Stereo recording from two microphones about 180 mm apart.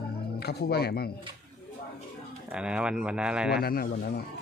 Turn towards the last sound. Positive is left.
turn(degrees=60)  # may be behind; listen again after turning